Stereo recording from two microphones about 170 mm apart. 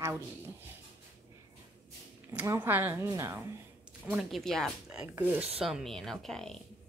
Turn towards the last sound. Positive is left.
turn(degrees=0)  # may be behind; listen again after turning